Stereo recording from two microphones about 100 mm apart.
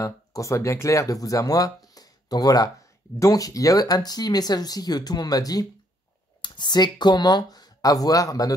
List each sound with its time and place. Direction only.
0.0 s speech: 35° left (ahead or behind)
2.0 s a sound: 40° left (ahead or behind)
3.2 s speech: 35° left (ahead or behind)
6.4 s speech: 50° left (ahead or behind)